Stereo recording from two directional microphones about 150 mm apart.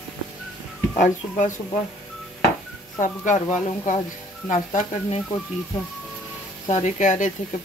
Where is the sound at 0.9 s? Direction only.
55° left (ahead or behind).